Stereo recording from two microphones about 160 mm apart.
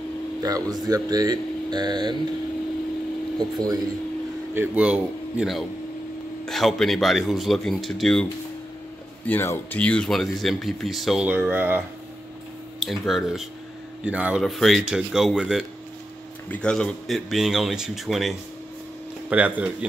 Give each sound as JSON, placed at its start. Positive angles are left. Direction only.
{"t": 0.4, "sound": "speech", "side_deg": -20}
{"t": 3.3, "sound": "speech", "side_deg": -25}
{"t": 4.6, "sound": "a man's voice", "side_deg": -5}
{"t": 12.8, "sound": "a man's voice", "side_deg": 0}